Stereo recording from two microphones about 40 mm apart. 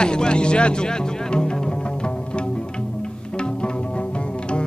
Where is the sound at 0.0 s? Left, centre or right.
Left.